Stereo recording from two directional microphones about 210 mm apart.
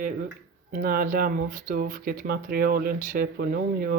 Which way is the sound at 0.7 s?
45° right (ahead or behind).